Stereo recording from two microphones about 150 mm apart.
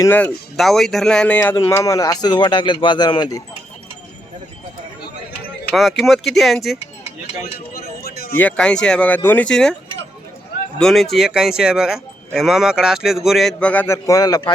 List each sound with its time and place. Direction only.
0.0 s speech: 15° left (ahead or behind)
0.5 s speech: centre (ahead or behind)
1.6 s speech: 20° left (ahead or behind)
6.0 s speech: centre (ahead or behind)
7.4 s a sound: 90° left
8.4 s speech: 5° left (ahead or behind)
10.8 s speech: centre (ahead or behind); by 14.5 s 25° left (ahead or behind)